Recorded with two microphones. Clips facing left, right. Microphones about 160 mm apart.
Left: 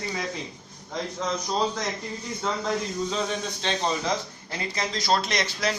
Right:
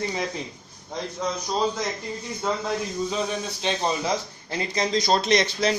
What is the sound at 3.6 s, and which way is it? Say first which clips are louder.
Speech: right 2 dB; 10° right (ahead or behind).